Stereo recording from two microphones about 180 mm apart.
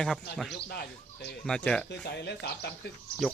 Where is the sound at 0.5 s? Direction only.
65° left (ahead or behind).